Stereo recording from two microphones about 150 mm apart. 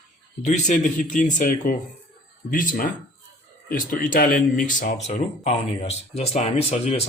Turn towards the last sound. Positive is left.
turn(degrees=40)  # may be behind; listen again after turning